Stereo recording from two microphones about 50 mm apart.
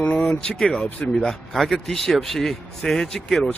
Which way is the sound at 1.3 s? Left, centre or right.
Centre.